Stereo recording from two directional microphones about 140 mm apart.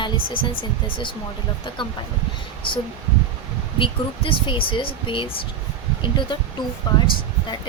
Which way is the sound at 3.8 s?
40° left (ahead or behind).